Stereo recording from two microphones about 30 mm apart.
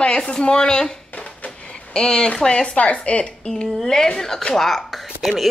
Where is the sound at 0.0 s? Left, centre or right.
Left.